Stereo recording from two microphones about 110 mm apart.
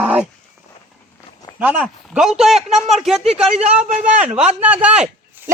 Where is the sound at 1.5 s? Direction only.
10° right (ahead or behind).